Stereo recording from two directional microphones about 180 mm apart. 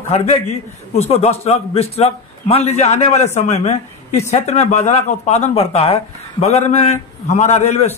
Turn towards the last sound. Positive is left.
turn(degrees=35)  # may be behind; listen again after turning